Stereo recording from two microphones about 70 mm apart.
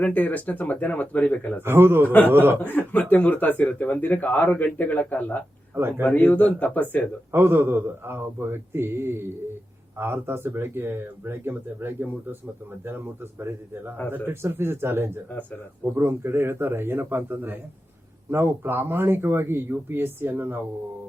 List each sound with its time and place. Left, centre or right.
0.0 s speech: left
1.6 s speech: right
2.6 s speech: left
7.3 s speech: right
14.3 s speech: right